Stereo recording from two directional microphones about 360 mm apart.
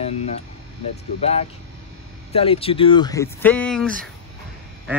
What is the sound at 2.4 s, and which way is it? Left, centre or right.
Speech, centre.